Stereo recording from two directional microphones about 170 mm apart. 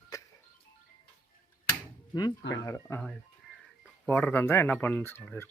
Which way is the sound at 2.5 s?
20° left (ahead or behind).